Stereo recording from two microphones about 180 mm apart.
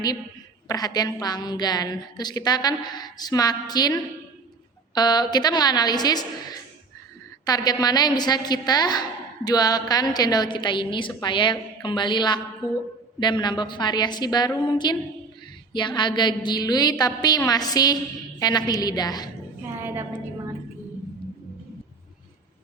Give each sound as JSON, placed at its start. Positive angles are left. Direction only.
{"t": 0.7, "sound": "a woman's voice", "side_deg": 20}
{"t": 4.9, "sound": "a woman's voice", "side_deg": 25}
{"t": 19.8, "sound": "a sound", "side_deg": -10}